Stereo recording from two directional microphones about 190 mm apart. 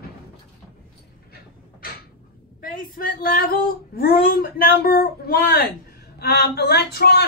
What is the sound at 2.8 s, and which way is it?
A woman's voice, 50° left (ahead or behind).